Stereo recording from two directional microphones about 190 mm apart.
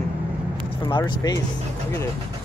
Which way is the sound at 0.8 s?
25° left (ahead or behind).